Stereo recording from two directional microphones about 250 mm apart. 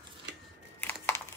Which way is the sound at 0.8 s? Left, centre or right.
Centre.